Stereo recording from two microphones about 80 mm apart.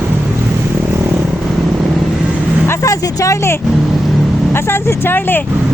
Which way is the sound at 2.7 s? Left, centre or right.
Left.